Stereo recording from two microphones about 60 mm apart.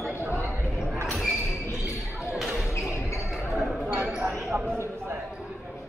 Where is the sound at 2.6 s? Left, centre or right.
Left.